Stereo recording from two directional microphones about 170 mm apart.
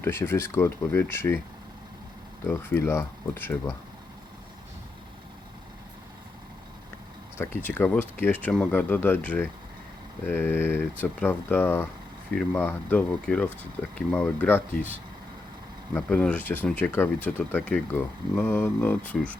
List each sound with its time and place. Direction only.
0.0 s speech: 15° left (ahead or behind)
2.4 s speech: 15° left (ahead or behind)
7.3 s speech: 15° left (ahead or behind)
16.0 s speech: 10° left (ahead or behind)